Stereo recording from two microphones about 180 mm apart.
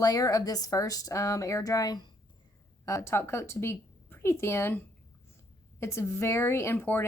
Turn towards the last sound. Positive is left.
turn(degrees=15)  # may be behind; listen again after turning